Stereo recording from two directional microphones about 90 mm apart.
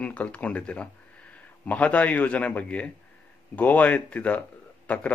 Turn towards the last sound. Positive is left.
turn(degrees=15)  # may be behind; listen again after turning